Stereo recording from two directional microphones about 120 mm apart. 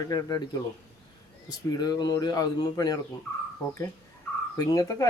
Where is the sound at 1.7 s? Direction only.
30° left (ahead or behind).